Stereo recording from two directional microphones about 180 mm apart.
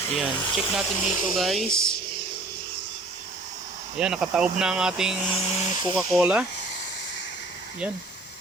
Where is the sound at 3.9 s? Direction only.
5° right (ahead or behind).